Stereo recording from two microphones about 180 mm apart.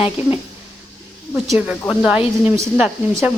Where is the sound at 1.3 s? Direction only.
5° right (ahead or behind).